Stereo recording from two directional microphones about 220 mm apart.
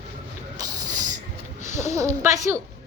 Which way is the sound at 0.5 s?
15° right (ahead or behind).